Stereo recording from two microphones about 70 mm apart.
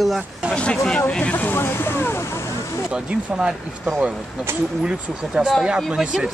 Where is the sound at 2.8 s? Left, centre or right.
Centre.